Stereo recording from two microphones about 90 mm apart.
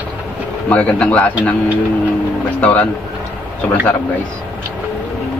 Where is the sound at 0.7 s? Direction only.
15° left (ahead or behind).